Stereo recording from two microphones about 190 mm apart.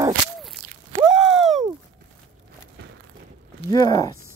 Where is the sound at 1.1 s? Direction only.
Centre (ahead or behind).